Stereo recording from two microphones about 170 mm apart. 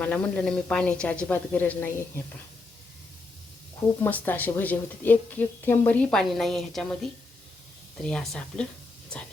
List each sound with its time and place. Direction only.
0.0 s a woman's voice: 5° left (ahead or behind)
4.0 s a woman's voice: 10° left (ahead or behind)